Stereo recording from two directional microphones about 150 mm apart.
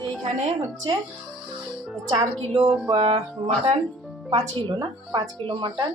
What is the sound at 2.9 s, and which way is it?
Music, 40° right (ahead or behind).